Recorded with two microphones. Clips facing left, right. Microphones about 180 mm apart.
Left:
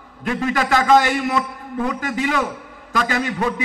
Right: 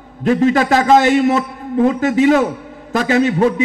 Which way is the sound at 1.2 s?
45° right (ahead or behind).